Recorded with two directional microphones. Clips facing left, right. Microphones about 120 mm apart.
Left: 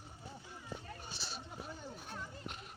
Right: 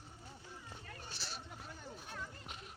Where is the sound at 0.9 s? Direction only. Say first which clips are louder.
Left 2 dB; 20° left (ahead or behind).